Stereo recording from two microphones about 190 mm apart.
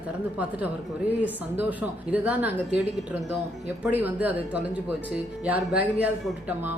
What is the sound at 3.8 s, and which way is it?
Speech, 10° right (ahead or behind).